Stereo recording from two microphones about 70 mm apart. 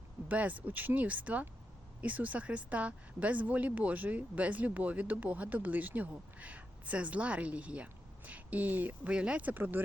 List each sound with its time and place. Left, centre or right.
0.3 s speech: right
9.1 s speech: centre